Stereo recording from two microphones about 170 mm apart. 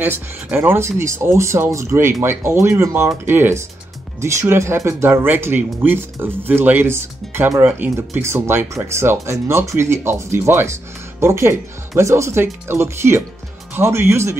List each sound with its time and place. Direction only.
0.0 s speech: 10° right (ahead or behind)